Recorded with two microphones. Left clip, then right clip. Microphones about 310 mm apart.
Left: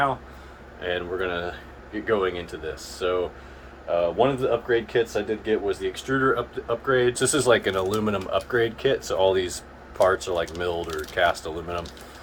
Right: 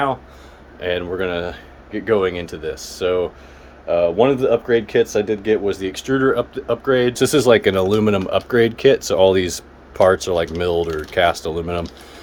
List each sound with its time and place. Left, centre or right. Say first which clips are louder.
0.8 s speech: right 6 dB; right